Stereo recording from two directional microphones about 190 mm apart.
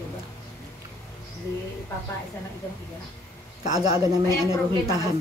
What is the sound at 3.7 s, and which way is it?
Speech, 20° right (ahead or behind).